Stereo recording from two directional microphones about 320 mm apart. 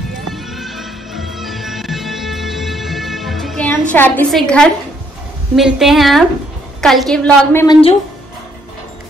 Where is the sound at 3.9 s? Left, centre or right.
Centre.